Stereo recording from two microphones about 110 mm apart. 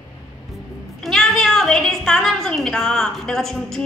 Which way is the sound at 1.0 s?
5° left (ahead or behind).